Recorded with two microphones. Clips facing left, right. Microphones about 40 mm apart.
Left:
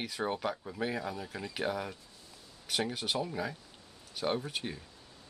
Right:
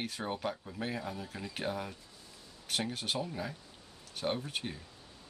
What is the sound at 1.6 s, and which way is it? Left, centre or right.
Speech, left.